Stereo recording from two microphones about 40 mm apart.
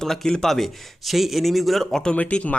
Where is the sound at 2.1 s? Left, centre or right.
Left.